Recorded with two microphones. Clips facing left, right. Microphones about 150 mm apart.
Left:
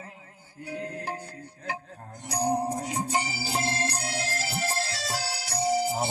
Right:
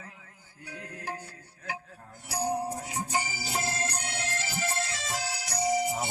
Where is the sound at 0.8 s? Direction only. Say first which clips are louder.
Left 4 dB; 30° left (ahead or behind).